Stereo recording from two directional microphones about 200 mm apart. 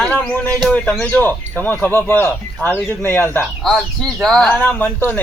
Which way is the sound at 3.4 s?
Centre (ahead or behind).